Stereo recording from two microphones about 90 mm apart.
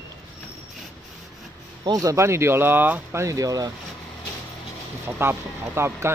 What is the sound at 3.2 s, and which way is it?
Speech, 40° right (ahead or behind).